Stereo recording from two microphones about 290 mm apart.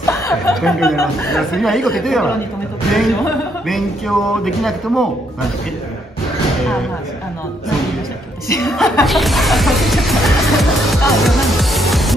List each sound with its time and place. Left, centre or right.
0.0 s speech: centre
8.6 s speech: centre